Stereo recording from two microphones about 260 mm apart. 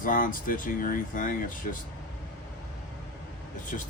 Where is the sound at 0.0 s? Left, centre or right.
Left.